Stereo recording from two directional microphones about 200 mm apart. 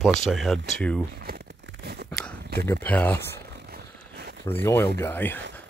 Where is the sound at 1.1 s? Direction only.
55° right (ahead or behind).